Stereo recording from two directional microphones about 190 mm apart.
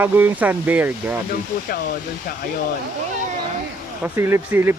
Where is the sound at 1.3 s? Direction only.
50° left (ahead or behind).